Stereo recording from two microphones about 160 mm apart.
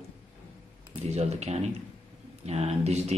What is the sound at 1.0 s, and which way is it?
Speech, 45° right (ahead or behind).